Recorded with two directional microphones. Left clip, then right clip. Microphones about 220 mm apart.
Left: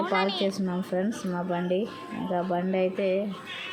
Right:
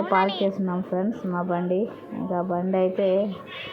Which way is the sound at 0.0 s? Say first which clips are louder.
Right 4 dB; 10° left (ahead or behind).